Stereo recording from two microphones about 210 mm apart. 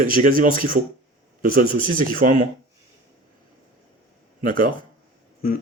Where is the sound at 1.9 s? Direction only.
45° right (ahead or behind).